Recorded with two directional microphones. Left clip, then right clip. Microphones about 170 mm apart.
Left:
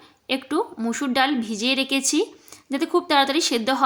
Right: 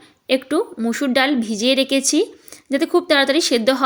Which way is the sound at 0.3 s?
20° right (ahead or behind).